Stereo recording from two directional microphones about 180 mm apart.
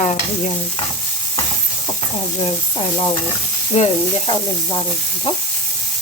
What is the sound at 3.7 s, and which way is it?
Speech, 30° left (ahead or behind).